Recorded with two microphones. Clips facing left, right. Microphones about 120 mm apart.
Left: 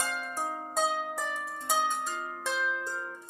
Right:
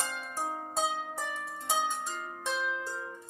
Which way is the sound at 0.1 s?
10° right (ahead or behind).